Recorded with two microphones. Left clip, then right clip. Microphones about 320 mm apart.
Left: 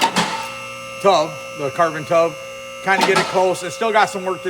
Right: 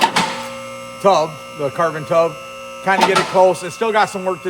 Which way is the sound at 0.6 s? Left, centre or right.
Right.